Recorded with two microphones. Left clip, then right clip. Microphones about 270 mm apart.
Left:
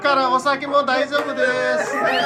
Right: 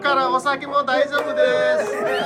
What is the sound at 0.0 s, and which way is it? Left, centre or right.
A man's voice, centre.